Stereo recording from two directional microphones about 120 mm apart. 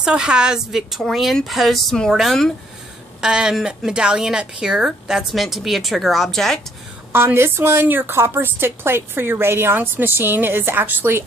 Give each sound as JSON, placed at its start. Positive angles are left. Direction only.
{"t": 0.0, "sound": "a woman's voice", "side_deg": -5}
{"t": 7.1, "sound": "a woman's voice", "side_deg": -20}